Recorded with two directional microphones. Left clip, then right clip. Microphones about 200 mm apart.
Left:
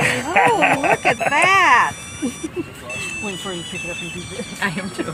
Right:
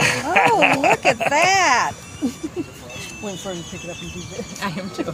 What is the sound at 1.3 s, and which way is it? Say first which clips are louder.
Speech: left 4 dB; 55° right (ahead or behind).